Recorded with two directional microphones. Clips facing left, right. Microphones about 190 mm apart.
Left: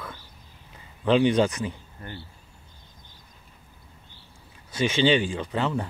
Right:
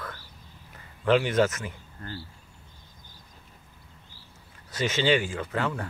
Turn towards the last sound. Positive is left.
turn(degrees=20)  # may be behind; listen again after turning